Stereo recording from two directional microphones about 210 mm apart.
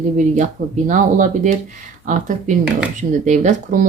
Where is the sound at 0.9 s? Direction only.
40° right (ahead or behind).